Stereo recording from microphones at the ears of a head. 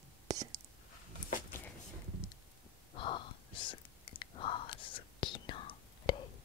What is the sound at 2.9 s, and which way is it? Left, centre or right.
Whispering, left.